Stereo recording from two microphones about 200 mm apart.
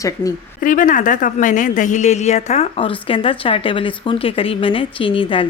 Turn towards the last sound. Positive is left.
turn(degrees=25)  # may be behind; listen again after turning